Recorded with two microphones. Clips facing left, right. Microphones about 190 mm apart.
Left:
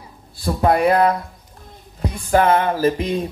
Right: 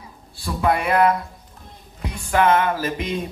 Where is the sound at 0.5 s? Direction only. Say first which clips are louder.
Left 5 dB; 40° left (ahead or behind).